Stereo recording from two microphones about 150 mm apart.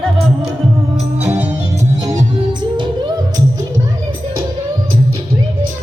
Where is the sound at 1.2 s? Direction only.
10° right (ahead or behind).